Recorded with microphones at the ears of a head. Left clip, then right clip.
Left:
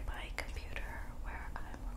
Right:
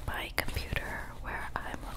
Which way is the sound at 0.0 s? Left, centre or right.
Right.